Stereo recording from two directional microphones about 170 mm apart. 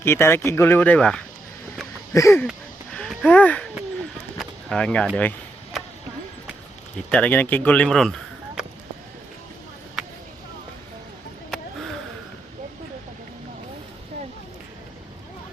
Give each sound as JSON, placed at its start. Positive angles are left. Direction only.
{"t": 0.0, "sound": "speech", "side_deg": 15}
{"t": 2.1, "sound": "speech", "side_deg": 15}
{"t": 2.9, "sound": "a sound", "side_deg": 5}
{"t": 4.4, "sound": "speech", "side_deg": 5}
{"t": 6.9, "sound": "speech", "side_deg": 5}
{"t": 10.0, "sound": "a sound", "side_deg": -5}